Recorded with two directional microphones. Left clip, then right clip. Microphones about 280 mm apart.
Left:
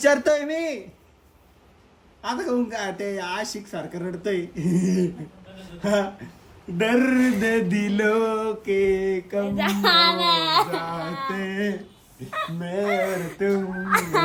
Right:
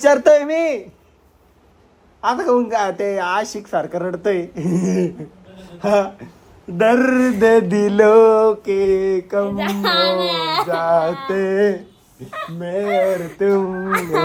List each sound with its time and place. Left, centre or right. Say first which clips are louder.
0.0 s speech: right 7 dB; centre
2.6 s mantra: right 11 dB; right
2.9 s speech: right 8 dB; centre
3.2 s mantra: right 9 dB; right
3.7 s speech: right 11 dB; centre
7.7 s mantra: right 11 dB; right
8.0 s speech: right 12 dB; centre
8.3 s mantra: right 10 dB; right
9.4 s speech: right 3 dB; centre
11.3 s mantra: right 11 dB; right
12.2 s speech: right 2 dB; centre